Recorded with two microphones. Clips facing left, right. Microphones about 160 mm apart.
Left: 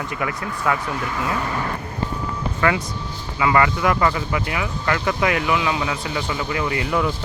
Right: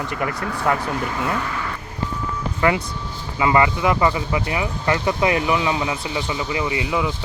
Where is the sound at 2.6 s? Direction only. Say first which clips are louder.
Right 1 dB; 20° right (ahead or behind).